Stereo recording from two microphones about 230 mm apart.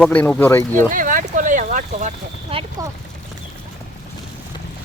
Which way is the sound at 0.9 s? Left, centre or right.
Right.